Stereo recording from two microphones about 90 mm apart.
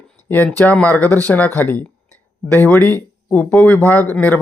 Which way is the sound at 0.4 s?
15° left (ahead or behind).